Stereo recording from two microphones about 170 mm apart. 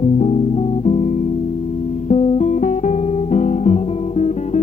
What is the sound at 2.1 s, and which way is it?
Guitar, 40° left (ahead or behind).